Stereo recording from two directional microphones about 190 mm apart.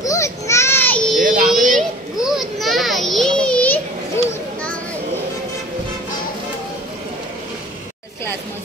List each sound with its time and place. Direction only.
0.0 s baby cry: 15° left (ahead or behind)
1.2 s music: 45° right (ahead or behind)
1.8 s children playing: centre (ahead or behind)